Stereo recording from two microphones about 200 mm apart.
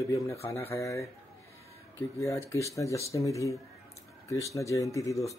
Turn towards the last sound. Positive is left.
turn(degrees=15)  # may be behind; listen again after turning